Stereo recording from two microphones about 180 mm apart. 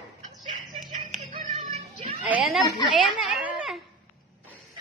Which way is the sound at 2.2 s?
5° right (ahead or behind).